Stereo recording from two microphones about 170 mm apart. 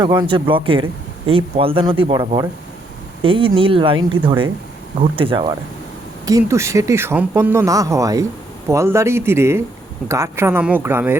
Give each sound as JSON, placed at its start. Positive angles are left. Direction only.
{"t": 0.0, "sound": "speech", "side_deg": -25}
{"t": 6.2, "sound": "speech", "side_deg": -20}